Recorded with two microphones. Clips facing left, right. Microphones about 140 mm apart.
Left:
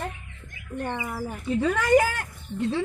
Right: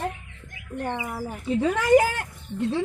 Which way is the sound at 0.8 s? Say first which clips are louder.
Right 1 dB; 5° right (ahead or behind).